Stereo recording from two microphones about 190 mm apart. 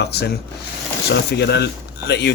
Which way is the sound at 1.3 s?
60° left (ahead or behind).